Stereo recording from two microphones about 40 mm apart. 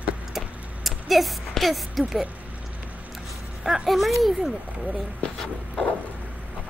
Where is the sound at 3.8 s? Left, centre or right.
Centre.